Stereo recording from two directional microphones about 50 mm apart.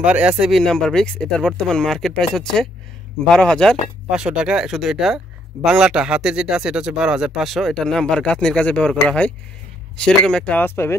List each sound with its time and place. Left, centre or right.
0.0 s speech: right
0.6 s speech: centre
4.1 s speech: centre
7.4 s speech: centre
7.7 s speech: centre
10.6 s speech: left